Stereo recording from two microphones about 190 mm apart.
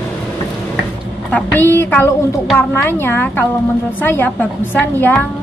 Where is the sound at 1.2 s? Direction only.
10° left (ahead or behind).